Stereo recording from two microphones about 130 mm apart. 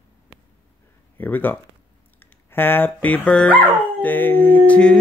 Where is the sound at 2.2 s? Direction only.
15° left (ahead or behind).